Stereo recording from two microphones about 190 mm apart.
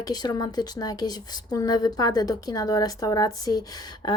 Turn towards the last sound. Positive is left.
turn(degrees=20)  # may be behind; listen again after turning